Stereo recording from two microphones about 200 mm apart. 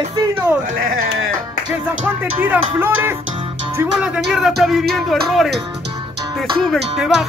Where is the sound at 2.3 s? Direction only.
10° right (ahead or behind).